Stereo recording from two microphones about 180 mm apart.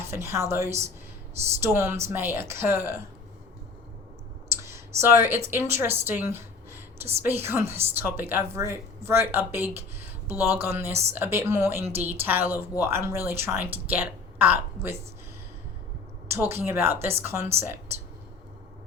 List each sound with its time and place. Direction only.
0.1 s a woman's voice: 15° right (ahead or behind)
4.6 s a sound: 15° right (ahead or behind)
5.5 s a woman's voice: 15° right (ahead or behind)
16.3 s a woman's voice: 15° right (ahead or behind)